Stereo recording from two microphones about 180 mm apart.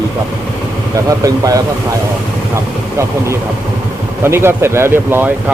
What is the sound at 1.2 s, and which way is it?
Speech, 20° right (ahead or behind).